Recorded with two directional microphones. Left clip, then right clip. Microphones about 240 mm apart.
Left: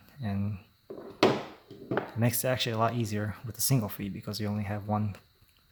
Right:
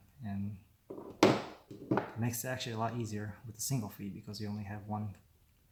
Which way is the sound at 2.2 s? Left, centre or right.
Left.